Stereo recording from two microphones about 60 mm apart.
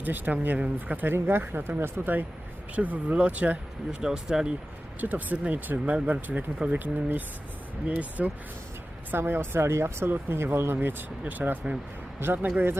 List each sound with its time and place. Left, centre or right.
0.0 s speech: right
4.0 s speech: centre
4.9 s speech: right
9.1 s speech: right